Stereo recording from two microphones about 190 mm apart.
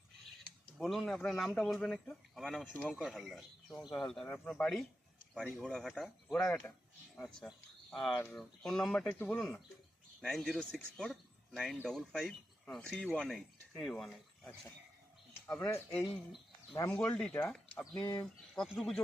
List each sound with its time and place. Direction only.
0.8 s speech: centre (ahead or behind)
18.0 s speech: 20° left (ahead or behind)
18.5 s speech: centre (ahead or behind)